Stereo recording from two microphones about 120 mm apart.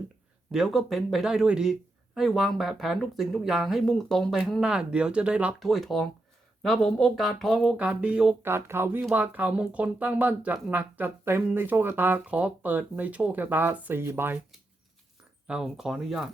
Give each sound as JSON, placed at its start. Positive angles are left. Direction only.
{"t": 0.5, "sound": "speech", "side_deg": 0}
{"t": 5.6, "sound": "speech", "side_deg": 0}
{"t": 8.4, "sound": "speech", "side_deg": -20}
{"t": 15.4, "sound": "speech", "side_deg": -5}